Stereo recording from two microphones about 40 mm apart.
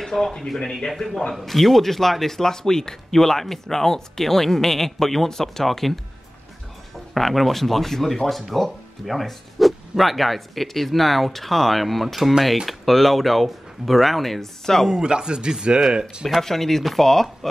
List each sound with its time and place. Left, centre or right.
0.0 s a sound: centre
0.6 s speech: centre
7.2 s speech: centre
14.9 s speech: centre
16.3 s speech: centre